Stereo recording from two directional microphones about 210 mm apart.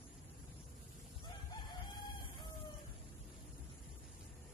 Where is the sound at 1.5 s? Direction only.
20° left (ahead or behind).